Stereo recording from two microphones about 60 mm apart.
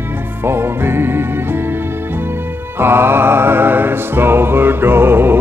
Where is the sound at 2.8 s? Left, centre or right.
Right.